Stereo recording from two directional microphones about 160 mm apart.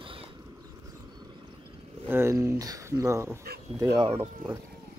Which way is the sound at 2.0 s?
15° right (ahead or behind).